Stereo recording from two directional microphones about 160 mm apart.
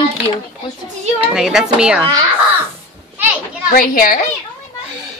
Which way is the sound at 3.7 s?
65° left (ahead or behind).